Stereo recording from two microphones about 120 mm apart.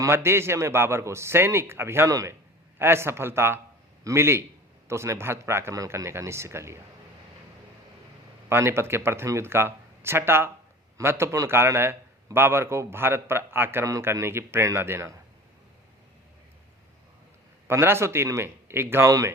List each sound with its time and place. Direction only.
0.0 s a man's voice: 20° right (ahead or behind)
8.4 s a man's voice: 20° right (ahead or behind)
17.7 s a man's voice: 20° right (ahead or behind)